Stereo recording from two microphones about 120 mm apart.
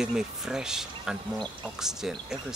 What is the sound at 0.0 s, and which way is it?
Speech, 5° right (ahead or behind).